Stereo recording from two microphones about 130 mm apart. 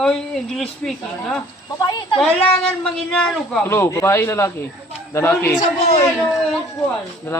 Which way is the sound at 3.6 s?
20° left (ahead or behind).